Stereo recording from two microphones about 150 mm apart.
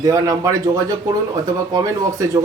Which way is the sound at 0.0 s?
25° right (ahead or behind).